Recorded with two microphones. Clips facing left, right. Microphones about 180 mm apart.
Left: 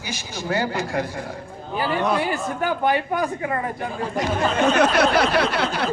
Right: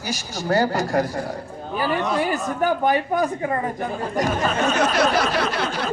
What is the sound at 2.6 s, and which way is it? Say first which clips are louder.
Speech: right 2 dB; 40° right (ahead or behind).